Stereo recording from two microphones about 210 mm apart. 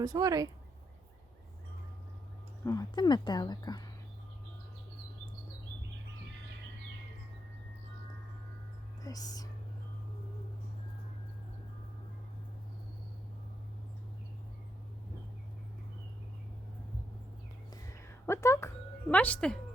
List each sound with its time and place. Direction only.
0.0 s speech: 15° right (ahead or behind)
2.6 s a woman's voice: 20° left (ahead or behind)
9.0 s speech: 15° left (ahead or behind)
17.7 s a sound: 15° left (ahead or behind)
19.1 s speech: 5° left (ahead or behind)